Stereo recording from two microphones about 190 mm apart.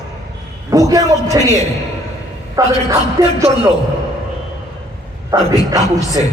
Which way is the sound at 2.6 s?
15° right (ahead or behind).